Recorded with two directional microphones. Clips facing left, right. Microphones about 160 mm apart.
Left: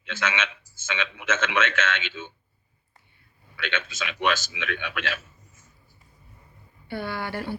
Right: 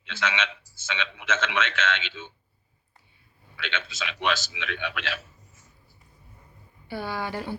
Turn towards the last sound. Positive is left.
turn(degrees=-15)  # may be behind; listen again after turning